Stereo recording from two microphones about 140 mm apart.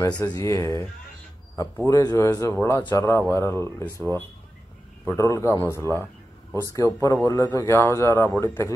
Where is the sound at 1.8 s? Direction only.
25° left (ahead or behind).